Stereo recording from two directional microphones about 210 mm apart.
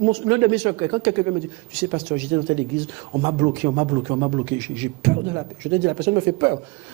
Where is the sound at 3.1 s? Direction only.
25° right (ahead or behind).